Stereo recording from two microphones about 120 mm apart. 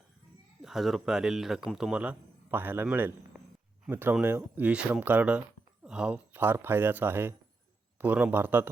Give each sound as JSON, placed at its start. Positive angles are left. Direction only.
{"t": 0.6, "sound": "a man's voice", "side_deg": 0}